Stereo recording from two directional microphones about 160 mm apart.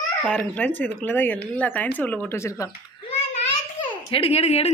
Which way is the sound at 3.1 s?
35° left (ahead or behind).